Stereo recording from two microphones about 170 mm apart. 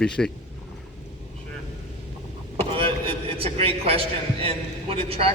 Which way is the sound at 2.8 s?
30° right (ahead or behind).